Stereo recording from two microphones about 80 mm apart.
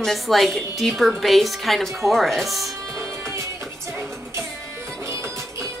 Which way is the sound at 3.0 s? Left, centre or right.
Right.